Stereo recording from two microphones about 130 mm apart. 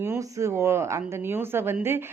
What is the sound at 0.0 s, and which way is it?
Speech, 20° right (ahead or behind).